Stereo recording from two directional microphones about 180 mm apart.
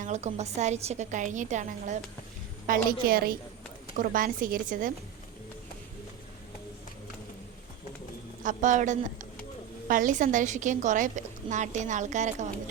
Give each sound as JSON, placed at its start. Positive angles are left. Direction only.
{"t": 0.0, "sound": "a woman's voice", "side_deg": -40}
{"t": 2.6, "sound": "a woman's voice", "side_deg": -50}
{"t": 8.4, "sound": "a woman's voice", "side_deg": -45}